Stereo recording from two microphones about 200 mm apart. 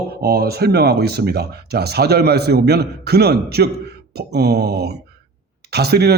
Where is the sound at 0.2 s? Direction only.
50° right (ahead or behind).